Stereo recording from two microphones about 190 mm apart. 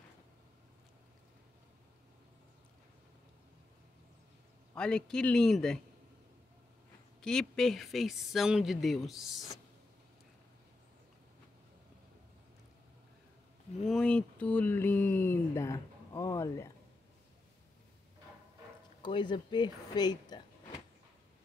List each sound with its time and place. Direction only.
4.7 s speech: 5° left (ahead or behind)
7.2 s speech: 5° left (ahead or behind)
13.8 s speech: 5° left (ahead or behind)
19.0 s speech: 25° left (ahead or behind)